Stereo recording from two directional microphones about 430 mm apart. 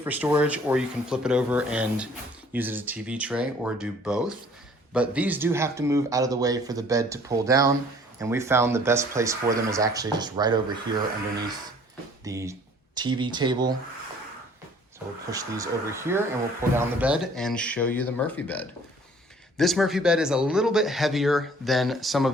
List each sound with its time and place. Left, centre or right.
0.0 s speech: centre
12.2 s speech: centre
14.9 s speech: centre